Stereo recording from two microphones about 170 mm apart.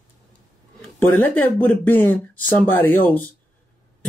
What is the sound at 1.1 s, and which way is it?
Speech, 10° left (ahead or behind).